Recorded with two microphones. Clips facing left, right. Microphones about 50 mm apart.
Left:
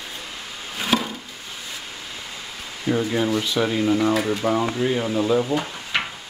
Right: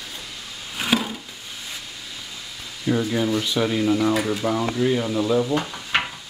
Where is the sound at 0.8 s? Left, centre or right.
Centre.